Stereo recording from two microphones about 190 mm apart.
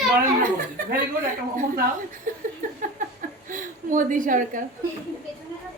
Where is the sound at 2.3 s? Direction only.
45° right (ahead or behind).